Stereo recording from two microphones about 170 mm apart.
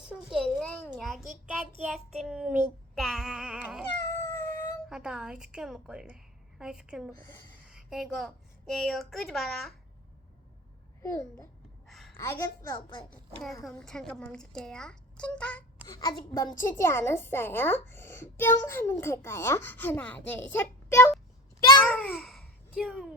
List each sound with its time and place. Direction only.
0.1 s a sound: centre (ahead or behind)
1.8 s a woman's voice: 5° right (ahead or behind)
2.9 s a sound: centre (ahead or behind)
4.1 s cat: 15° left (ahead or behind)
4.9 s a woman's voice: 5° right (ahead or behind)
11.0 s a woman's voice: 15° left (ahead or behind)
11.9 s a sound: centre (ahead or behind)
12.1 s a woman's voice: 15° left (ahead or behind)
13.4 s a woman's voice: centre (ahead or behind)
15.9 s a woman's voice: 20° left (ahead or behind)
21.8 s babbling: 5° left (ahead or behind)